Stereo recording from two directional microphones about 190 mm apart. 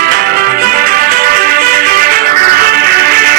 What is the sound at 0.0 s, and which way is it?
Music, 50° right (ahead or behind).